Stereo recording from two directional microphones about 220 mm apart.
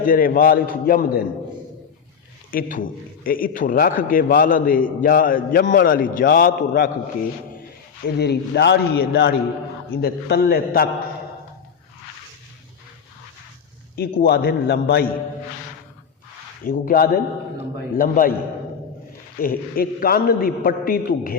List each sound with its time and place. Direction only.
0.0 s a man's voice: 40° left (ahead or behind)
2.5 s a man's voice: 40° left (ahead or behind)
8.0 s a man's voice: 50° left (ahead or behind)
13.9 s a man's voice: 45° left (ahead or behind)
16.6 s a man's voice: 40° left (ahead or behind)
19.4 s a man's voice: 40° left (ahead or behind)